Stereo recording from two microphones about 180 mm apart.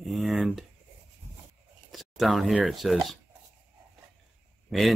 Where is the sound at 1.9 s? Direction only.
Centre (ahead or behind).